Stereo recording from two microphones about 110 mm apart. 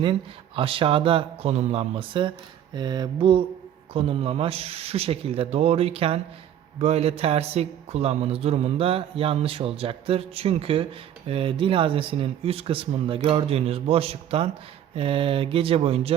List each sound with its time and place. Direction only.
0.0 s speech: 55° right (ahead or behind)
2.7 s a sound: 40° right (ahead or behind)
3.9 s speech: 60° right (ahead or behind)
6.7 s speech: 70° right (ahead or behind)